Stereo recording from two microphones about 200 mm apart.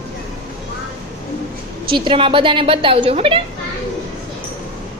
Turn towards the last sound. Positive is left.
turn(degrees=-30)  # may be behind; listen again after turning